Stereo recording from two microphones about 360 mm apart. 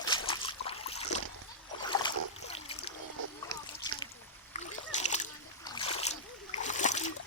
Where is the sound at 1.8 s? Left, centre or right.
Centre.